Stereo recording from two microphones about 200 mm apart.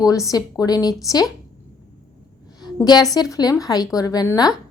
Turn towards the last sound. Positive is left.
turn(degrees=15)  # may be behind; listen again after turning